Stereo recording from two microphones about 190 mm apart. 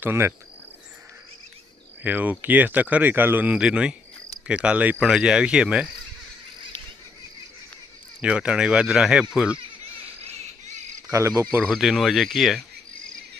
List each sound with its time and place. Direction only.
0.0 s speech: 15° right (ahead or behind)
2.0 s speech: 10° right (ahead or behind)
8.2 s speech: 5° right (ahead or behind)
11.1 s speech: 15° right (ahead or behind)
11.6 s speech: centre (ahead or behind)